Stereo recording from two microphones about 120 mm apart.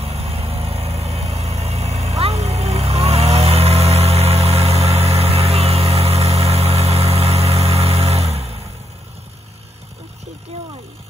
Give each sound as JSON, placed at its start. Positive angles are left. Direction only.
{"t": 0.0, "sound": "vehicle", "side_deg": -60}